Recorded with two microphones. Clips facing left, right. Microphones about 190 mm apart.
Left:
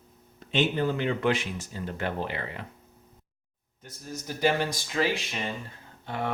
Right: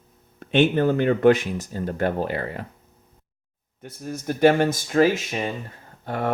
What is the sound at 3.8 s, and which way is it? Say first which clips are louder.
Speech: right 7 dB; 60° right (ahead or behind).